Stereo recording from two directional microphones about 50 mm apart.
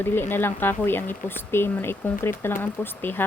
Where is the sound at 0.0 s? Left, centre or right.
Left.